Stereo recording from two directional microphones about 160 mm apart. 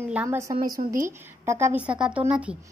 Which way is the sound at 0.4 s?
20° right (ahead or behind).